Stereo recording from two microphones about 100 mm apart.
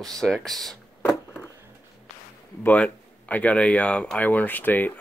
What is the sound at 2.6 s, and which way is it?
Speech, 15° left (ahead or behind).